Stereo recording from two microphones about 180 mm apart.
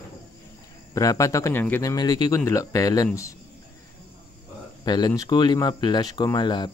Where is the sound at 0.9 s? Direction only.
20° left (ahead or behind).